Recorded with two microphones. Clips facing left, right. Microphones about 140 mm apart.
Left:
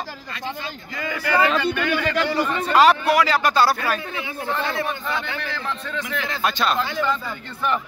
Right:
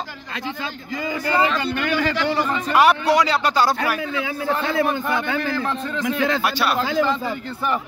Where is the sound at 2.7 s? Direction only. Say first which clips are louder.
Even; 15° right (ahead or behind).